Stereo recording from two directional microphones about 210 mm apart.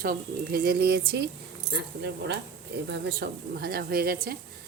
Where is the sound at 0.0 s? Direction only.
45° right (ahead or behind).